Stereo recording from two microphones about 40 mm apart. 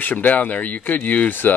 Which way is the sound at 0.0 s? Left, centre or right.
Left.